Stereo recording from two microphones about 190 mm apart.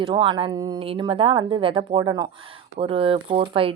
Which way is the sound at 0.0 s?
25° right (ahead or behind).